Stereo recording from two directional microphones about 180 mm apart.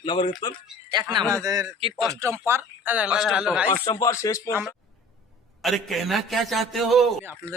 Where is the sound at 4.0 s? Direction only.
15° left (ahead or behind).